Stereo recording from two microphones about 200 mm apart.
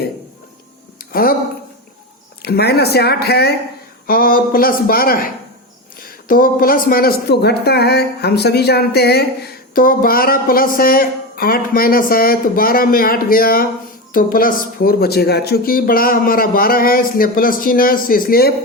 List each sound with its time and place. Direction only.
1.1 s speech: 45° left (ahead or behind)
2.4 s speech: 55° left (ahead or behind)